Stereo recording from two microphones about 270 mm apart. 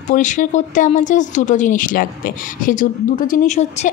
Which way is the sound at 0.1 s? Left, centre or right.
Left.